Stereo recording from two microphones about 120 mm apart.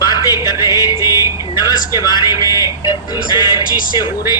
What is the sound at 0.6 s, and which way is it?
Music, 30° left (ahead or behind).